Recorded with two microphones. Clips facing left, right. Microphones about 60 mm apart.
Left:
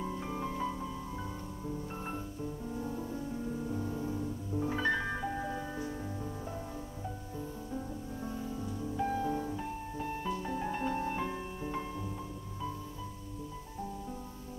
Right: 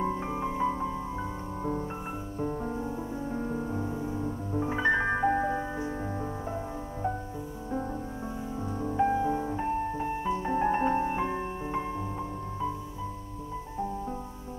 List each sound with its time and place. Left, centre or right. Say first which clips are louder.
0.0 s music: right 7 dB; right
2.4 s music: right 10 dB; right
2.8 s music: right 4 dB; right
8.5 s music: right 10 dB; right